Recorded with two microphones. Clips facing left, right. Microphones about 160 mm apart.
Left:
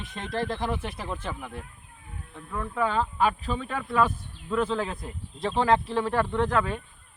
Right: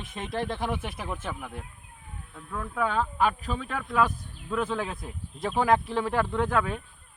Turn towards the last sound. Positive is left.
turn(degrees=-5)  # may be behind; listen again after turning